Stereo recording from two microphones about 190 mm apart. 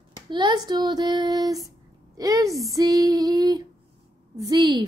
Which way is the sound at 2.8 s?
20° right (ahead or behind).